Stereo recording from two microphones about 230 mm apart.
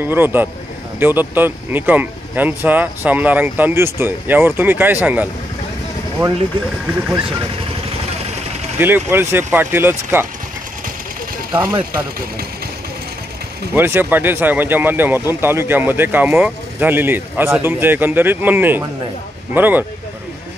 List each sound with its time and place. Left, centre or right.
0.0 s speech: centre
8.7 s speech: centre
11.5 s speech: centre
13.7 s speech: centre